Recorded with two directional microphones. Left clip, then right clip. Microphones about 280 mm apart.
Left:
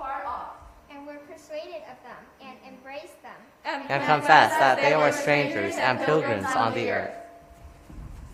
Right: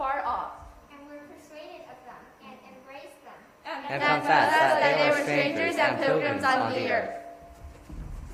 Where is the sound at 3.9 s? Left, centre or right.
Left.